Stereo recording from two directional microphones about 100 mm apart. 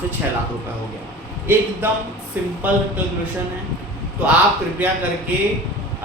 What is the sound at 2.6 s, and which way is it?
Speech, 15° right (ahead or behind).